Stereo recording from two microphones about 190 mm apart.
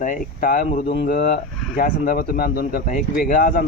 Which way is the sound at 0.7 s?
35° left (ahead or behind).